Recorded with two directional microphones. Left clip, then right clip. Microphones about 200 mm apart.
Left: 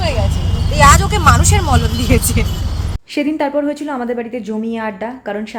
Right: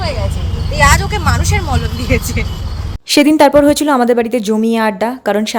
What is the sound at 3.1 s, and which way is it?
A woman's voice, 45° right (ahead or behind).